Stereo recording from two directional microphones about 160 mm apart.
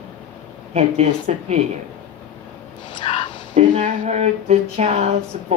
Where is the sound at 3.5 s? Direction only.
45° right (ahead or behind).